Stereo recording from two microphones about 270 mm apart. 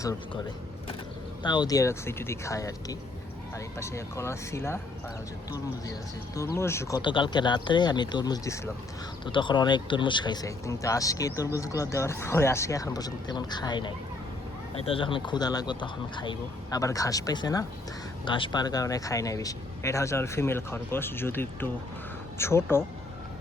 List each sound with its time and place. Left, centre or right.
1.4 s speech: centre